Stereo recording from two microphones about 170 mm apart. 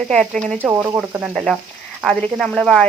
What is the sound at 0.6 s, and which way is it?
Speech, 15° right (ahead or behind).